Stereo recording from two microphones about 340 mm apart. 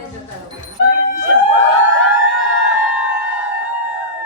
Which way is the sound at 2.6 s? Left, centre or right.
Left.